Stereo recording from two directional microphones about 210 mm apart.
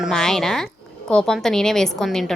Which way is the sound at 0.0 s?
Centre (ahead or behind).